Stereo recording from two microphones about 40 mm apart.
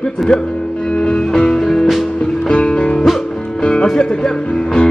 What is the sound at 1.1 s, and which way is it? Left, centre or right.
Music, centre.